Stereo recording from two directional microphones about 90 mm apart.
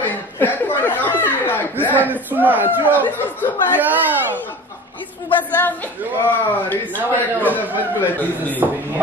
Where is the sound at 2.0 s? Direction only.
20° right (ahead or behind).